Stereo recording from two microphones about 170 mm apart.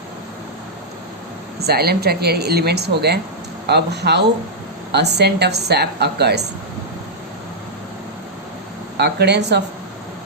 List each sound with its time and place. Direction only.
1.5 s speech: 70° right (ahead or behind)
9.0 s speech: 75° right (ahead or behind)